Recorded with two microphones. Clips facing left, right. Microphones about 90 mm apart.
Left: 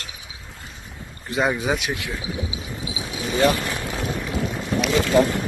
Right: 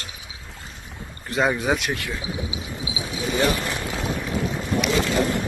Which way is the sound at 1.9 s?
15° left (ahead or behind).